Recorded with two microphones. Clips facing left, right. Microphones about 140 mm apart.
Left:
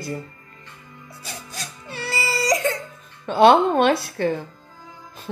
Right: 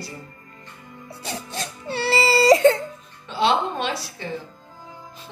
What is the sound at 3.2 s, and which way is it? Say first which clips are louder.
A woman's voice: left 7 dB; 55° left (ahead or behind).